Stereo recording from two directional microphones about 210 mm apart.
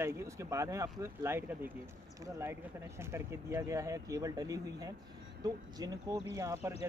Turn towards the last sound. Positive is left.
turn(degrees=-15)  # may be behind; listen again after turning